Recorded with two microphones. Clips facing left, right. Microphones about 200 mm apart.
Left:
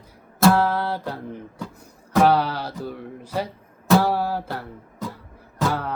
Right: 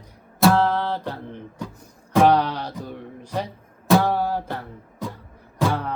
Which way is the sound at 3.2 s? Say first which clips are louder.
Left 1 dB; 5° left (ahead or behind).